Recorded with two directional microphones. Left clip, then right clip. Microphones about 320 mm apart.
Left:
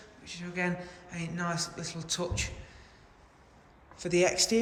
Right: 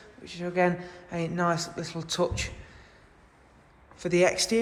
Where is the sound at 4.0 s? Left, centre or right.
Centre.